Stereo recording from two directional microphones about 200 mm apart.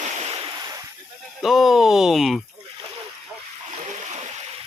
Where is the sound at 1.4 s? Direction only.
Centre (ahead or behind).